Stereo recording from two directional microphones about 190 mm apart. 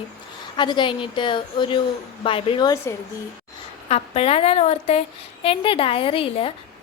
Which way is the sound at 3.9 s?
30° left (ahead or behind).